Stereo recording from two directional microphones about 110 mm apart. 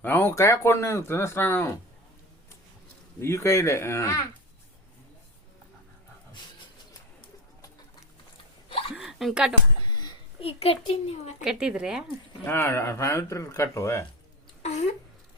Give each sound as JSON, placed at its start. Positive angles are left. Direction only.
{"t": 0.0, "sound": "speech", "side_deg": 20}
{"t": 3.2, "sound": "speech", "side_deg": 25}
{"t": 9.0, "sound": "a sound", "side_deg": 0}
{"t": 10.4, "sound": "a woman's voice", "side_deg": 65}
{"t": 11.4, "sound": "speech", "side_deg": -5}
{"t": 12.5, "sound": "speech", "side_deg": 25}
{"t": 14.6, "sound": "a sound", "side_deg": 85}